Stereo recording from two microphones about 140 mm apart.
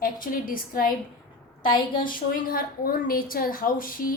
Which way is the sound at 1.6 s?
35° left (ahead or behind).